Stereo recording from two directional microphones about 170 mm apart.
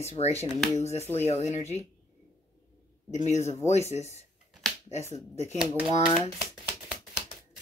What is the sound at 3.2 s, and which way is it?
Speech, 40° left (ahead or behind).